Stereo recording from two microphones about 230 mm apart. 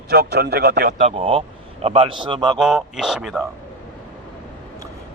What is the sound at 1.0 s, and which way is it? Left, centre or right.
A man's voice, right.